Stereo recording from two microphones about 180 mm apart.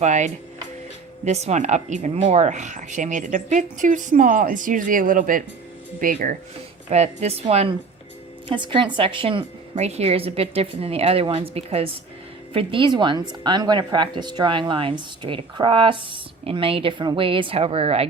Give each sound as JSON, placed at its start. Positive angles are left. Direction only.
{"t": 0.0, "sound": "a woman's voice", "side_deg": -40}
{"t": 6.9, "sound": "a woman's voice", "side_deg": -40}